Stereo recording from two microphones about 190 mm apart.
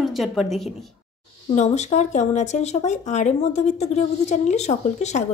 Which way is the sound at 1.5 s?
35° left (ahead or behind).